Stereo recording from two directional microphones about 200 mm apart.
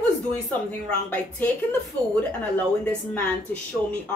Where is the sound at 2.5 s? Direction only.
5° left (ahead or behind).